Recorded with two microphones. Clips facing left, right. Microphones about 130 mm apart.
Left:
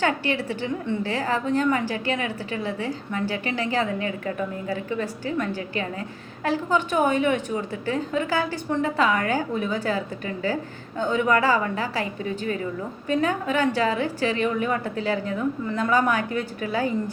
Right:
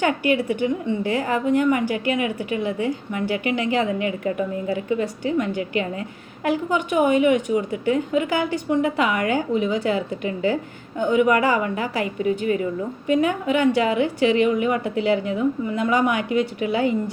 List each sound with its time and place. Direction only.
0.0 s a woman's voice: 20° right (ahead or behind)